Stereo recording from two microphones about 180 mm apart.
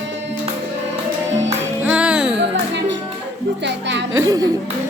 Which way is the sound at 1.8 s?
5° right (ahead or behind).